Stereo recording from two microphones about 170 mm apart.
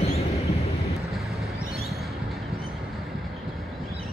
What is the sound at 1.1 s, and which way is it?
Vehicle, centre (ahead or behind).